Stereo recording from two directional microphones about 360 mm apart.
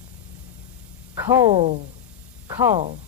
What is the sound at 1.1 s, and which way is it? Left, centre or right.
Speech, centre.